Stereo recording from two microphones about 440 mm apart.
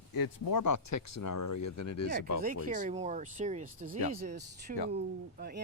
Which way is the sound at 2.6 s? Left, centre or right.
Centre.